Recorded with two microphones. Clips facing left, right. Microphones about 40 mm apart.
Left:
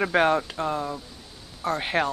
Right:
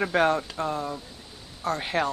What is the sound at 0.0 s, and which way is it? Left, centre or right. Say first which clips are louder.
Speech: left 2 dB; centre.